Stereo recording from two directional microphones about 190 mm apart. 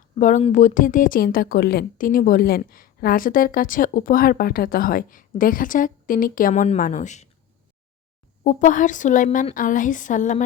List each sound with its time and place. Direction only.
0.2 s speech: 40° left (ahead or behind)
8.4 s speech: 40° left (ahead or behind)